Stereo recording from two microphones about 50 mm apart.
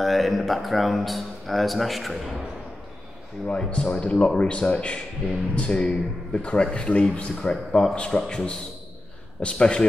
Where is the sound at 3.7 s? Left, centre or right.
Centre.